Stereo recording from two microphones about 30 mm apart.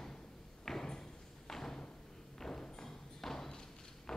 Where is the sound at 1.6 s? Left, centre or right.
Centre.